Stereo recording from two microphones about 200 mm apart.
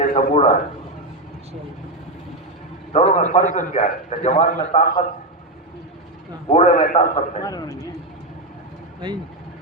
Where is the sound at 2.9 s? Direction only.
35° left (ahead or behind).